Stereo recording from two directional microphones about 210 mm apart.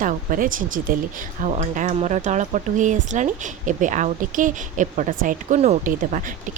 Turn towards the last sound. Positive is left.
turn(degrees=-40)  # may be behind; listen again after turning